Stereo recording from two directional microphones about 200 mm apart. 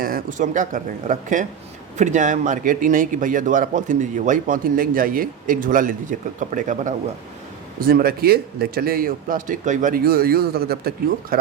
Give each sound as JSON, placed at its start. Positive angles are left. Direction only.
{"t": 0.0, "sound": "a man's voice", "side_deg": -45}